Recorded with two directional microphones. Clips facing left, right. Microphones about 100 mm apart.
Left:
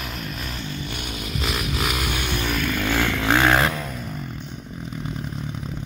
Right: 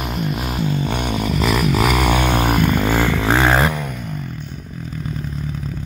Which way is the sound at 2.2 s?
50° right (ahead or behind).